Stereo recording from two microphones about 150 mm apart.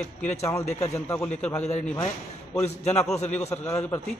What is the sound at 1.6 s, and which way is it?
A man's voice, 45° left (ahead or behind).